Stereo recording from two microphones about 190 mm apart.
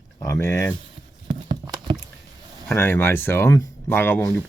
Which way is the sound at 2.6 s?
10° left (ahead or behind).